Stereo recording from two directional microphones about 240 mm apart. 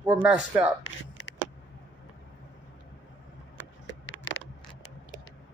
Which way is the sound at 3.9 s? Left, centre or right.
Left.